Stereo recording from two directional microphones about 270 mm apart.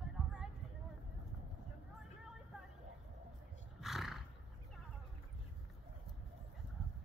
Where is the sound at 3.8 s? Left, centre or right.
Centre.